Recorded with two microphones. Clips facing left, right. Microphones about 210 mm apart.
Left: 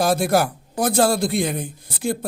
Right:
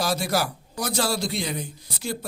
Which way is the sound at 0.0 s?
55° left (ahead or behind).